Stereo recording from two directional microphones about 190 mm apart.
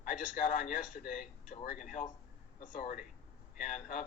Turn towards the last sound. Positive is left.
turn(degrees=40)  # may be behind; listen again after turning